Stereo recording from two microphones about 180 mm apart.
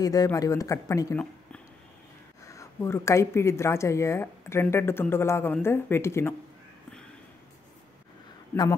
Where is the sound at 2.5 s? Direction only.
15° left (ahead or behind).